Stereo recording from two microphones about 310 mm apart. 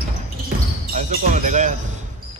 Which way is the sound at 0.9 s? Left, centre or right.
Right.